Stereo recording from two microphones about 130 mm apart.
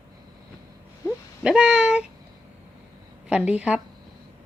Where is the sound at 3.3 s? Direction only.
10° right (ahead or behind).